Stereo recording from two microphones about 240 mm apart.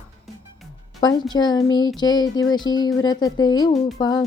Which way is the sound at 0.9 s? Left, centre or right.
Centre.